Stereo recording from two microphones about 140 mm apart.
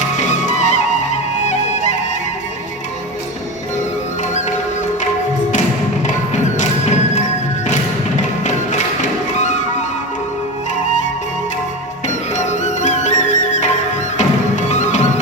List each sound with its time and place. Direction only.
0.2 s music: 60° left (ahead or behind)
6.3 s music: 55° left (ahead or behind)
12.0 s music: 60° left (ahead or behind)